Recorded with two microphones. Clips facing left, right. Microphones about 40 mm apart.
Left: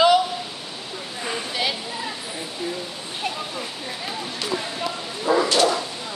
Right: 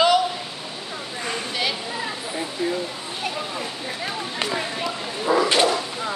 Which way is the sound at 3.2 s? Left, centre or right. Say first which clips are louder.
Even; centre.